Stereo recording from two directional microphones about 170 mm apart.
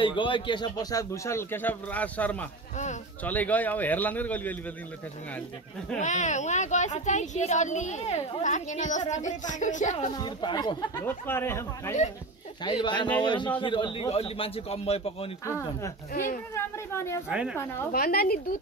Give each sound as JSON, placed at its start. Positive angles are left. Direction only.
{"t": 0.0, "sound": "speech", "side_deg": 30}
{"t": 5.9, "sound": "speech", "side_deg": 45}
{"t": 10.1, "sound": "speech", "side_deg": 25}
{"t": 11.1, "sound": "speech", "side_deg": 15}
{"t": 12.6, "sound": "a man's voice", "side_deg": 25}
{"t": 15.4, "sound": "speech", "side_deg": 15}
{"t": 16.1, "sound": "speech", "side_deg": 55}
{"t": 16.5, "sound": "speech", "side_deg": 15}
{"t": 17.3, "sound": "a woman's voice", "side_deg": -5}
{"t": 17.9, "sound": "a woman's voice", "side_deg": 65}